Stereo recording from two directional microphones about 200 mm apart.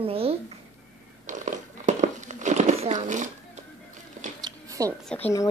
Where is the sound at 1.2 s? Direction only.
40° right (ahead or behind).